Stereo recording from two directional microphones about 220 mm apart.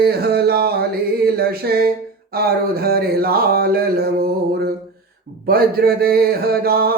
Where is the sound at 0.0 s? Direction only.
45° right (ahead or behind).